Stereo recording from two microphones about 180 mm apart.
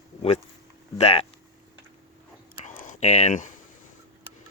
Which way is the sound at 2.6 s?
45° left (ahead or behind).